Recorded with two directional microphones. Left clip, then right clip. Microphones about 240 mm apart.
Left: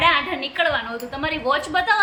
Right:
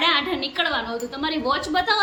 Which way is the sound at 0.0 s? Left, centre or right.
Centre.